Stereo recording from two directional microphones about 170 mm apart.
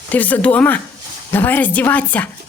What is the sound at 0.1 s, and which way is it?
A woman's voice, 10° left (ahead or behind).